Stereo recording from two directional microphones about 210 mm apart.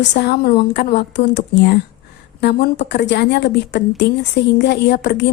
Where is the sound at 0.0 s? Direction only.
55° left (ahead or behind).